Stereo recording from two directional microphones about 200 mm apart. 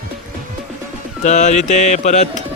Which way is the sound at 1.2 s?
35° left (ahead or behind).